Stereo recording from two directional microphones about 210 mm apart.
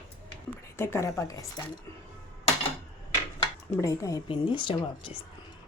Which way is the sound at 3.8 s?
15° left (ahead or behind).